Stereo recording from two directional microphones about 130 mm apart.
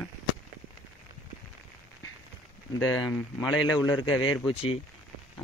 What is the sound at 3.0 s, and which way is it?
Speech, 25° left (ahead or behind).